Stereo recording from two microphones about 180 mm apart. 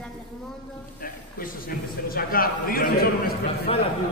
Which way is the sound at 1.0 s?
50° left (ahead or behind).